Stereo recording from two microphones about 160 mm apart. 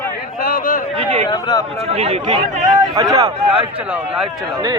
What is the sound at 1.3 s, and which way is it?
Speech, 25° left (ahead or behind).